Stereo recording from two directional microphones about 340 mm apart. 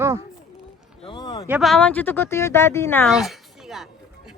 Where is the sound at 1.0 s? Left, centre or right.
Centre.